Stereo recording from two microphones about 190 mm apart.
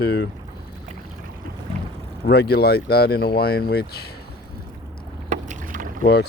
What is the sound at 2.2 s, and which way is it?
Speech, 60° left (ahead or behind).